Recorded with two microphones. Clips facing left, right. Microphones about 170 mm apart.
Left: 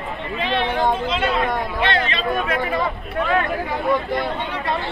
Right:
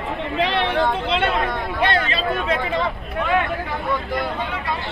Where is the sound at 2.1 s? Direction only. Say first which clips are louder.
Even; 25° right (ahead or behind).